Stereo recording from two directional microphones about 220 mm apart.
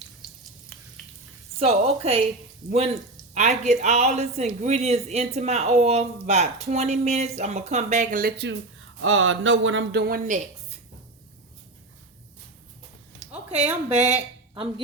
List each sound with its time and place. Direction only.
1.5 s a woman's voice: 30° right (ahead or behind); by 8.5 s 45° right (ahead or behind)
9.0 s speech: 65° right (ahead or behind)
10.2 s a woman's voice: 35° right (ahead or behind)
13.3 s a sound: 30° right (ahead or behind)
13.9 s speech: 30° right (ahead or behind)